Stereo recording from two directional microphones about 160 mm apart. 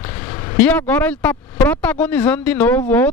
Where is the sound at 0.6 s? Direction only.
10° left (ahead or behind).